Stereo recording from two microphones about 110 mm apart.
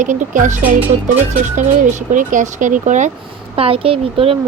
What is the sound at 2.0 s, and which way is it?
Speech, 90° right.